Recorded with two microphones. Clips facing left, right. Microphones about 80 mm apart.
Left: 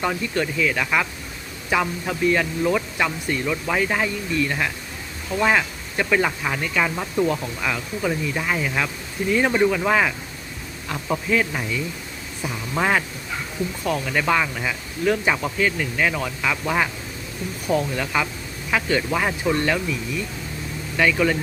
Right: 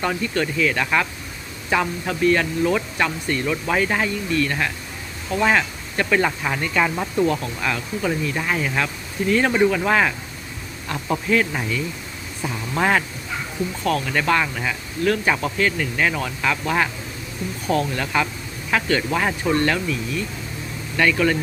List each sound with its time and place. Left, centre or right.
0.0 s speech: centre
12.7 s speech: centre
15.0 s speech: centre
15.3 s speech: centre